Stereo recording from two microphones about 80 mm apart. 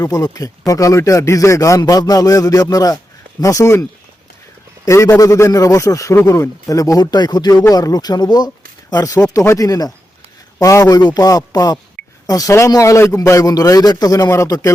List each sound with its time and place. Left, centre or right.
0.0 s speech: left
3.4 s speech: left
4.9 s speech: left
9.3 s speech: left